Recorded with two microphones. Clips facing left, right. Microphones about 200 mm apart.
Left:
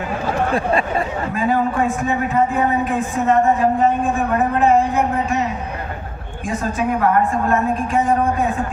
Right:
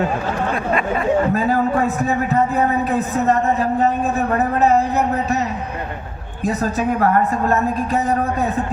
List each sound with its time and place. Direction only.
0.5 s a sound: 30° left (ahead or behind)
1.3 s a man's voice: 40° right (ahead or behind)
6.4 s a man's voice: 40° right (ahead or behind)